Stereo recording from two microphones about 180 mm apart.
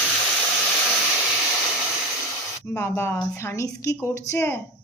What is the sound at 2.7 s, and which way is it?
A woman's voice, 15° left (ahead or behind).